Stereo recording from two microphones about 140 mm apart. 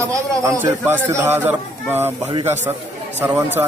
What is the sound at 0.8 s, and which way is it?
A man's voice, 15° right (ahead or behind).